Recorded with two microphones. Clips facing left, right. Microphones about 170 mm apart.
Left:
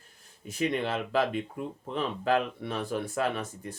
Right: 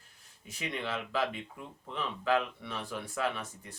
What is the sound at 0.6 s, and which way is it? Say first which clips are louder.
Speech: left 8 dB; 50° left (ahead or behind).